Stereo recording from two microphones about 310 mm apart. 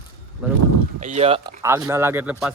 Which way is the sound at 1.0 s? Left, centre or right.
Centre.